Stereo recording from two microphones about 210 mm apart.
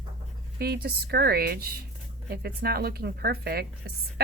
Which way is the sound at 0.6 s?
50° right (ahead or behind).